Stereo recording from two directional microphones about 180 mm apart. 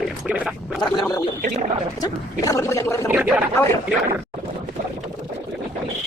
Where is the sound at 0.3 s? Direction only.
5° right (ahead or behind).